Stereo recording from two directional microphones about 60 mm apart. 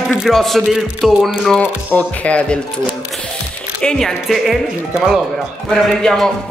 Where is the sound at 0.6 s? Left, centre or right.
Centre.